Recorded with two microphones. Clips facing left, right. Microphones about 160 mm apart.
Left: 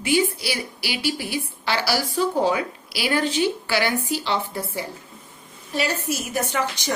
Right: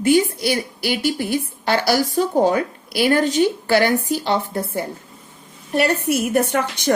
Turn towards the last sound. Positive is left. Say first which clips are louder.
# right 5 dB
turn(degrees=-60)  # may be behind; listen again after turning